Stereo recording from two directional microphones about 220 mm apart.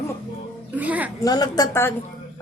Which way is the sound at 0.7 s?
5° right (ahead or behind).